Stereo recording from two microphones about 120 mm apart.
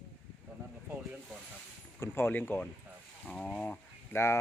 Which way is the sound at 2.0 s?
20° left (ahead or behind).